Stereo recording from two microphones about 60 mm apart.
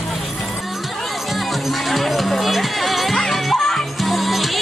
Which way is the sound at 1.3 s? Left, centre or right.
Centre.